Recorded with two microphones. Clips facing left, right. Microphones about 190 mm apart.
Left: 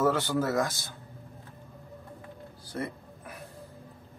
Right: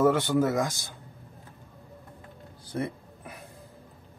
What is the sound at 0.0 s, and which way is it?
Speech, 15° right (ahead or behind).